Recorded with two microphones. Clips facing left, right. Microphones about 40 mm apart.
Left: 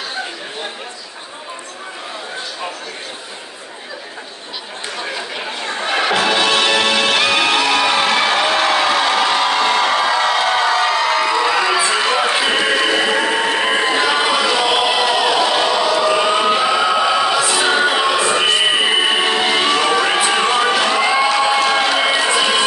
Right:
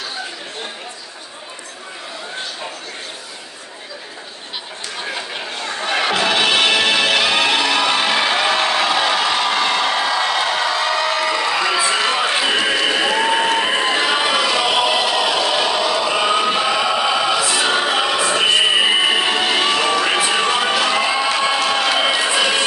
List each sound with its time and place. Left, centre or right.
5.6 s music: left
5.9 s music: centre
6.3 s music: centre
9.0 s crowd: centre
10.5 s crowd: centre
11.5 s a sound: centre
16.4 s music: centre